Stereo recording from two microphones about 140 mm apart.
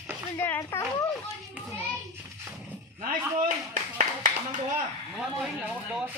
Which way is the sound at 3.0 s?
75° right (ahead or behind).